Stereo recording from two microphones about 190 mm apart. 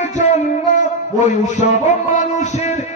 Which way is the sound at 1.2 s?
40° left (ahead or behind).